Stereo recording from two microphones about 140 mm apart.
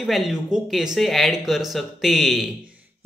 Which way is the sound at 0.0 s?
Centre (ahead or behind).